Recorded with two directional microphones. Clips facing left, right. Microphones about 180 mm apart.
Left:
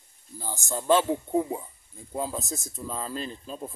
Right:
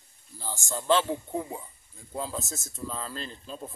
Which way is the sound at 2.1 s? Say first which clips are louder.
Left 3 dB; 15° left (ahead or behind).